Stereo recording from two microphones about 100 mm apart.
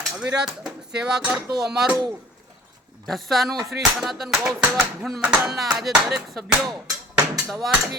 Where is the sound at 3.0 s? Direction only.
Centre (ahead or behind).